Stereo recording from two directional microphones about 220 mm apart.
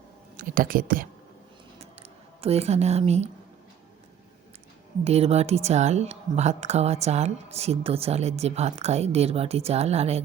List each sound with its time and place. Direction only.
0.3 s speech: 40° right (ahead or behind)
1.8 s a sound: 30° right (ahead or behind)
5.0 s speech: 30° right (ahead or behind)